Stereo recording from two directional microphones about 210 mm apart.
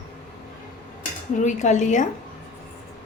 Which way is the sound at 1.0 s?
35° left (ahead or behind).